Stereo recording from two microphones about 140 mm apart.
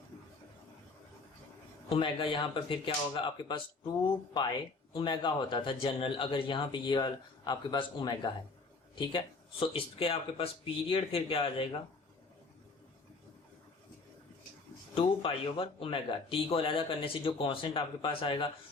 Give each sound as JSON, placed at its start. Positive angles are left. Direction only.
{"t": 1.9, "sound": "speech", "side_deg": 40}
{"t": 4.9, "sound": "speech", "side_deg": 35}
{"t": 14.9, "sound": "speech", "side_deg": 40}